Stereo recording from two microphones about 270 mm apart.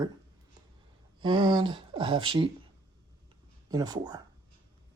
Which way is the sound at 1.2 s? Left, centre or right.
Centre.